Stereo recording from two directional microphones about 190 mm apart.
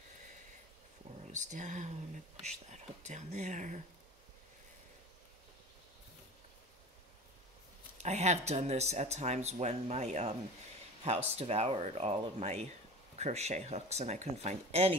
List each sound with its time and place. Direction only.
1.2 s speech: 40° right (ahead or behind)
8.0 s speech: 35° right (ahead or behind)